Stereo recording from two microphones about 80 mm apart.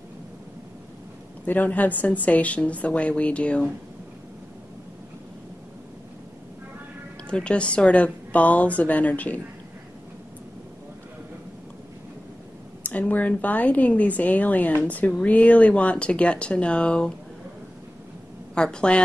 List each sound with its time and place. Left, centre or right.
1.4 s a woman's voice: left
7.2 s a woman's voice: centre
12.8 s a woman's voice: centre
18.5 s a woman's voice: centre